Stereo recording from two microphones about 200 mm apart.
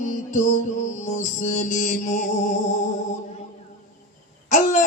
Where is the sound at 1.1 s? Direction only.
35° left (ahead or behind).